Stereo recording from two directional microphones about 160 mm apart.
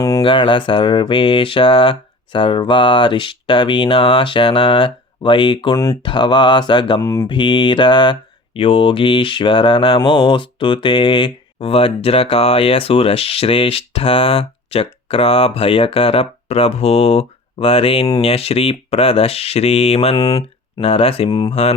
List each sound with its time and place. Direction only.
0.2 s mantra: 30° left (ahead or behind)
7.0 s mantra: 20° left (ahead or behind)
7.3 s mantra: 30° left (ahead or behind)
20.1 s speech: 25° left (ahead or behind)
20.8 s mantra: 40° left (ahead or behind)
21.5 s mantra: 40° left (ahead or behind)